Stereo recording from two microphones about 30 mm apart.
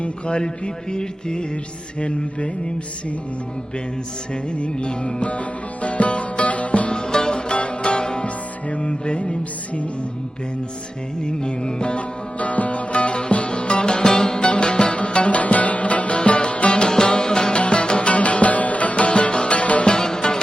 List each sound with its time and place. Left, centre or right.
0.0 s mantra: left
2.0 s mantra: left
4.5 s mantra: left
5.8 s music: left
6.9 s music: left
11.3 s music: left
12.4 s music: left
14.4 s music: left
17.5 s music: left
18.1 s music: left
20.0 s music: left